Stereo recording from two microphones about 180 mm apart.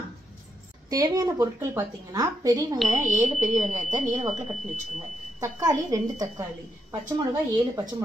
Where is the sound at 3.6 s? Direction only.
40° right (ahead or behind).